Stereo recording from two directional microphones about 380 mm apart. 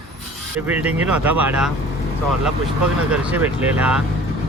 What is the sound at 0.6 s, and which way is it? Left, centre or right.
Speech, centre.